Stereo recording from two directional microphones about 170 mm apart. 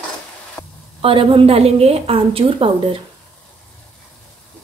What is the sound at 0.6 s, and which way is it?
Sizzle, 10° left (ahead or behind).